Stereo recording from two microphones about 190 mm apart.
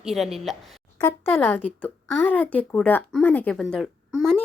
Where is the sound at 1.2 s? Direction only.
10° left (ahead or behind).